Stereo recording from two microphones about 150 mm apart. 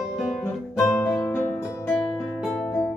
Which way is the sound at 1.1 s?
20° left (ahead or behind).